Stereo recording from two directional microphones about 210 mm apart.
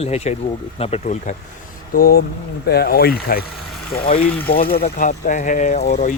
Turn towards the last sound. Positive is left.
turn(degrees=35)  # may be behind; listen again after turning